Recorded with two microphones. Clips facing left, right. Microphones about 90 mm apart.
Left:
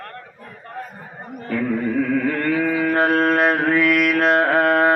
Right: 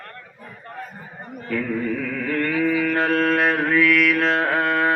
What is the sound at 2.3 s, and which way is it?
Mantra, 30° left (ahead or behind).